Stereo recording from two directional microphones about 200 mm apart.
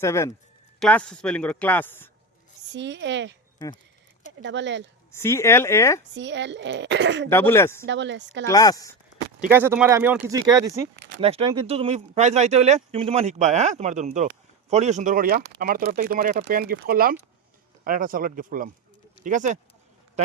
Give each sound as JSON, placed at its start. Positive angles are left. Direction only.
{"t": 0.0, "sound": "speech", "side_deg": 15}
{"t": 2.7, "sound": "speech", "side_deg": -60}
{"t": 4.4, "sound": "speech", "side_deg": -60}
{"t": 5.1, "sound": "speech", "side_deg": 15}
{"t": 6.1, "sound": "speech", "side_deg": -60}
{"t": 7.3, "sound": "speech", "side_deg": 10}
{"t": 7.9, "sound": "speech", "side_deg": -65}
{"t": 8.4, "sound": "speech", "side_deg": 20}
{"t": 9.5, "sound": "speech", "side_deg": -10}
{"t": 11.2, "sound": "speech", "side_deg": -30}